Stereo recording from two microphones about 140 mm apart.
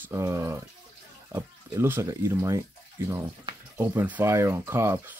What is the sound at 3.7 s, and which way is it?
Speech, 15° right (ahead or behind).